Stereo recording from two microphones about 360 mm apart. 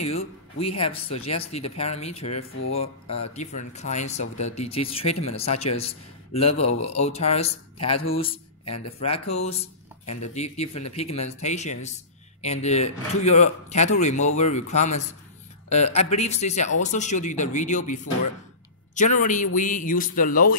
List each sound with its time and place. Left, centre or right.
0.0 s speech: centre
2.3 s speech: left
2.7 s a man's voice: centre
8.6 s speech: left
9.3 s a man's voice: centre